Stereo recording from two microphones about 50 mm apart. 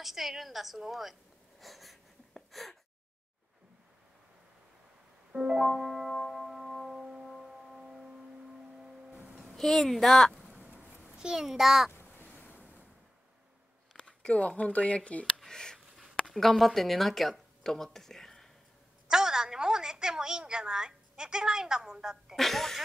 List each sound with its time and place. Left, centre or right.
0.0 s a woman's voice: centre
1.6 s wheeze: centre
5.3 s music: centre
9.6 s a woman's voice: centre
10.5 s a sound: right
10.8 s a sound: right
11.1 s a child's voice: centre
12.4 s waves: right
13.9 s a sound: left
14.6 s speech: left
15.3 s a sound: centre
16.3 s speech: centre
19.0 s a woman's voice: centre
22.3 s a woman's voice: centre